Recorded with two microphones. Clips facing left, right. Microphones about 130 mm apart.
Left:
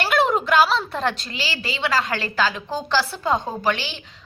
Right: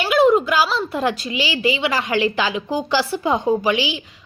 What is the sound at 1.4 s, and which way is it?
A woman's voice, 15° right (ahead or behind).